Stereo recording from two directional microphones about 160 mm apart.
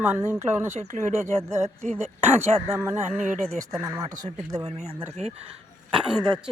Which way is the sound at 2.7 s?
15° right (ahead or behind).